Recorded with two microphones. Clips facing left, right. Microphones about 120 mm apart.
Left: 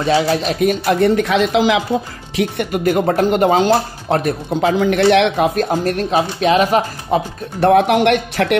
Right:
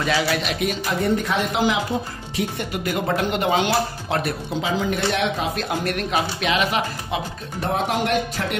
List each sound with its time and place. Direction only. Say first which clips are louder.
0.0 s speech: left 7 dB; 35° left (ahead or behind)
0.8 s speech: left 6 dB; 75° left (ahead or behind); by 1.8 s 90° left
2.3 s a man's voice: left 7 dB; 70° left (ahead or behind)
2.7 s speech: left 9 dB; 45° left (ahead or behind); by 5.5 s 70° left (ahead or behind)
5.5 s speech: left 7 dB; 40° left (ahead or behind)
7.6 s a man's voice: left 11 dB; 65° left (ahead or behind)